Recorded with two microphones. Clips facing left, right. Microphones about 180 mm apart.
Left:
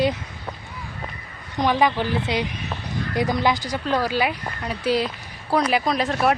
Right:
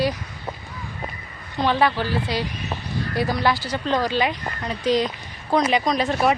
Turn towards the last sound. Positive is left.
turn(degrees=0)  # may be behind; listen again after turning